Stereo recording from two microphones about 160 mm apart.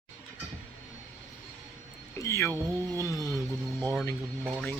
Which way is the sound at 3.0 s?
20° left (ahead or behind).